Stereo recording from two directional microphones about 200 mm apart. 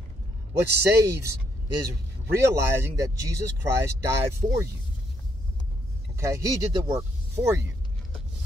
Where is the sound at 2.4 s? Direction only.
15° right (ahead or behind).